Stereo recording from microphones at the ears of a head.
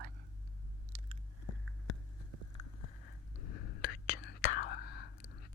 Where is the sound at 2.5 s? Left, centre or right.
Left.